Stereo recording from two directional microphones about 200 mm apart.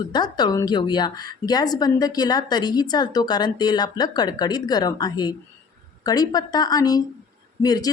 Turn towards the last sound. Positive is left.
turn(degrees=20)  # may be behind; listen again after turning